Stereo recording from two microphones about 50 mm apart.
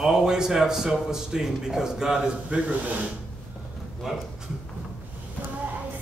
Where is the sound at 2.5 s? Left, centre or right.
Right.